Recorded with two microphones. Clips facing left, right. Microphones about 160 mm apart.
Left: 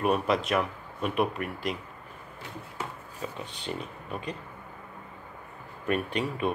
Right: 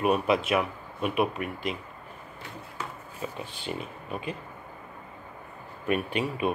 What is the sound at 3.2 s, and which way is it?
Speech, 5° right (ahead or behind).